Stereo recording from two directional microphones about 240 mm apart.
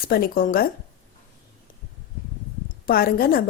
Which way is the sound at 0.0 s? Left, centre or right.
Left.